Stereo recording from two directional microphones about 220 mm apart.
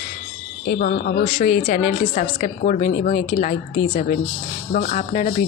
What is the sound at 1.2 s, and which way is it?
Speech, 30° left (ahead or behind).